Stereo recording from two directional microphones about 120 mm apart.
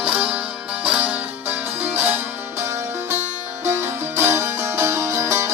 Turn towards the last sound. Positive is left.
turn(degrees=-20)  # may be behind; listen again after turning